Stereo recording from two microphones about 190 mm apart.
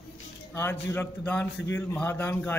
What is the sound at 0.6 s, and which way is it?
A man's voice, 10° left (ahead or behind).